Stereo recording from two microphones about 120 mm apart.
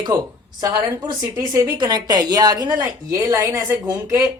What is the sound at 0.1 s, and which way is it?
A woman's voice, 25° right (ahead or behind).